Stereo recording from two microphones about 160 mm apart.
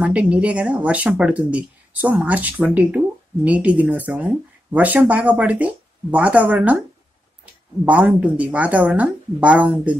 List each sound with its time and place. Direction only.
0.0 s speech: 10° right (ahead or behind)
7.8 s speech: 10° right (ahead or behind)